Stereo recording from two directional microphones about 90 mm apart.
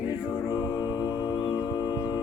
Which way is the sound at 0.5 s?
45° left (ahead or behind).